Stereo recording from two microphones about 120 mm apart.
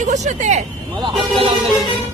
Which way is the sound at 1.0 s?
45° right (ahead or behind).